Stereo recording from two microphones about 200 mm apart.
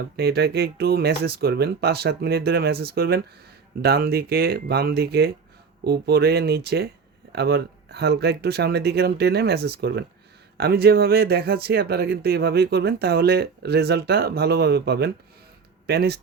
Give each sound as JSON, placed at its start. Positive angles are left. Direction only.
{"t": 0.2, "sound": "speech", "side_deg": -55}